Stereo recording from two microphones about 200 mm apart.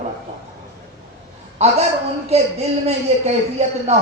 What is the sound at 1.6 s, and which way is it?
Speech, 30° right (ahead or behind).